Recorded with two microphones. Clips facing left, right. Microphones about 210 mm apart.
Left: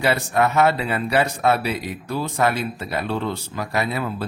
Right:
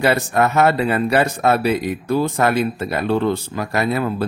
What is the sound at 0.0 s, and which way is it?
Speech, 45° right (ahead or behind).